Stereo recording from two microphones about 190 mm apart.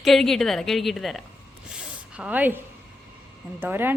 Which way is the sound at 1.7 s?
5° right (ahead or behind).